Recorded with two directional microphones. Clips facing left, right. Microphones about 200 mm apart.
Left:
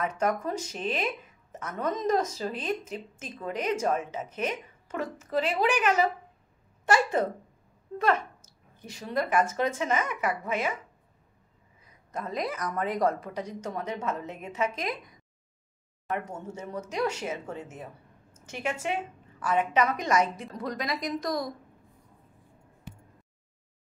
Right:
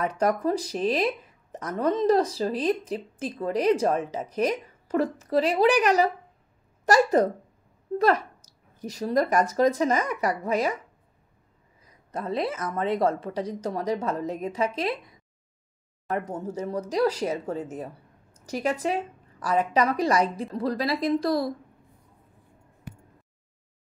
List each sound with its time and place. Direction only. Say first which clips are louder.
0.0 s speech: right 4 dB; 35° right (ahead or behind)
12.1 s a woman's voice: right 4 dB; 30° right (ahead or behind)